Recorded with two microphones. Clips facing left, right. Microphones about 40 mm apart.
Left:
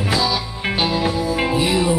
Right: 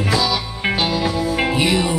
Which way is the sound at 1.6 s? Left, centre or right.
Right.